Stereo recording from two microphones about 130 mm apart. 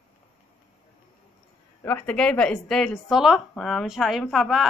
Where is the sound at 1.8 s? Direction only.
15° left (ahead or behind).